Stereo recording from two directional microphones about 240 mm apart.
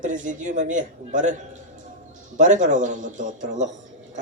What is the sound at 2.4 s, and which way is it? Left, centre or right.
A man's voice, right.